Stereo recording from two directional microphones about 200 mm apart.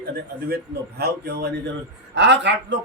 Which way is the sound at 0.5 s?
50° right (ahead or behind).